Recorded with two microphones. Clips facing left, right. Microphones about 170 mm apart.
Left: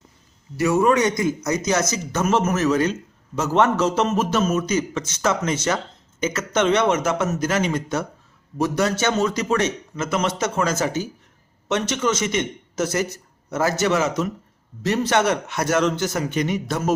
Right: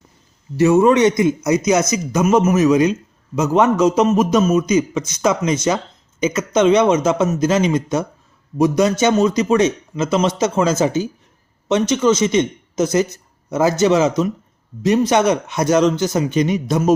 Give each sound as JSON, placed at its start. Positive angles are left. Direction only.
{"t": 0.5, "sound": "a man's voice", "side_deg": -25}